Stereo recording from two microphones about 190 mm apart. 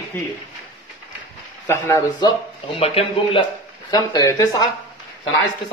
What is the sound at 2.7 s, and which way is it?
Speech, 30° left (ahead or behind).